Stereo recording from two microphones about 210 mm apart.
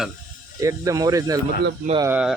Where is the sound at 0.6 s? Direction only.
15° right (ahead or behind).